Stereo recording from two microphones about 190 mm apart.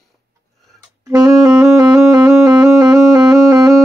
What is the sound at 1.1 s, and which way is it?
Saxophone, 20° right (ahead or behind).